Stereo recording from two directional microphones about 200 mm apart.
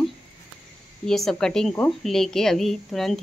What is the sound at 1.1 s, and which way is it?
Speech, centre (ahead or behind).